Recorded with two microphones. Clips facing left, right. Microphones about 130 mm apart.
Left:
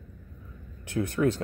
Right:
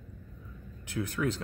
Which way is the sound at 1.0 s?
45° left (ahead or behind).